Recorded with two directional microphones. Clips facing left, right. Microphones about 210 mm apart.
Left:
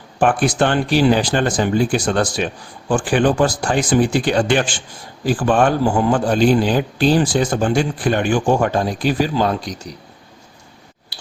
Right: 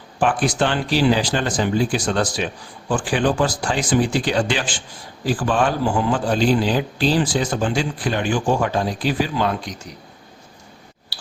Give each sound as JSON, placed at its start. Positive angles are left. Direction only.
{"t": 0.2, "sound": "a man's voice", "side_deg": 50}